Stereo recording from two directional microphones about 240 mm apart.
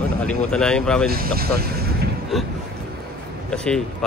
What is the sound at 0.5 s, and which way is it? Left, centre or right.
Speech, centre.